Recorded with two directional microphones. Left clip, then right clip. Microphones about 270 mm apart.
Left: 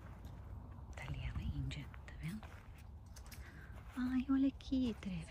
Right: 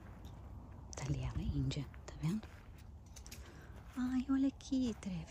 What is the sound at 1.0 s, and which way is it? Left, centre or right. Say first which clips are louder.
Whispering: right 5 dB; centre.